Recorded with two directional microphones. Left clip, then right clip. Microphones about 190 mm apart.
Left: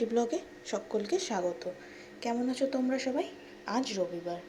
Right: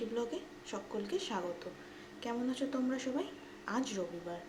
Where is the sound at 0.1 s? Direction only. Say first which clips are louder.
Left 8 dB; 30° left (ahead or behind).